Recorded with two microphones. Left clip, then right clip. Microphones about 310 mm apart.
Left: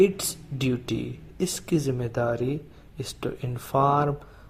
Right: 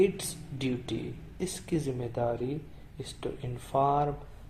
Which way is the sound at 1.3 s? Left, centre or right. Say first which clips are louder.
Left 7 dB; left.